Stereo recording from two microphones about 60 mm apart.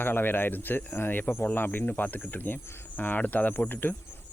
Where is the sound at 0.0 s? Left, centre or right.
Left.